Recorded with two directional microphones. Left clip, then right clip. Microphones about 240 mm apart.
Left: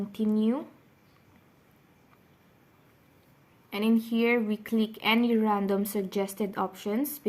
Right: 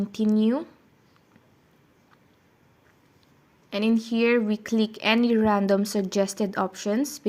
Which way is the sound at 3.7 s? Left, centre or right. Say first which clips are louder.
Right 3 dB; right.